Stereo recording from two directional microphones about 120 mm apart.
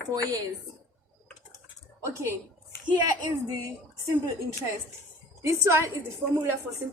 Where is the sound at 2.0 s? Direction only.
25° right (ahead or behind).